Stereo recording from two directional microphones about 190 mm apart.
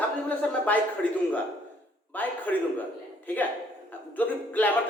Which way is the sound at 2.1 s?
10° left (ahead or behind).